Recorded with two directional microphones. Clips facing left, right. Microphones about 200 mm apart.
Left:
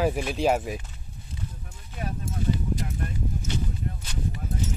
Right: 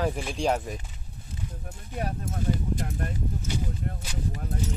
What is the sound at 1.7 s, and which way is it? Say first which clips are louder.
Clip-clop: right 3 dB; 40° right (ahead or behind).